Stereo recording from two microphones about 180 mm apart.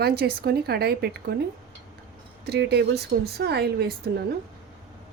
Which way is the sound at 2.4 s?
65° right (ahead or behind).